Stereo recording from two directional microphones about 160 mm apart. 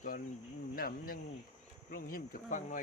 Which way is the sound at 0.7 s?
65° left (ahead or behind).